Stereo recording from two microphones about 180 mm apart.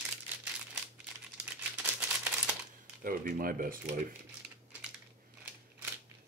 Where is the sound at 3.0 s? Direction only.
50° right (ahead or behind).